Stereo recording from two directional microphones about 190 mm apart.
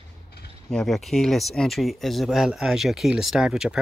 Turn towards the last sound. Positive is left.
turn(degrees=-5)  # may be behind; listen again after turning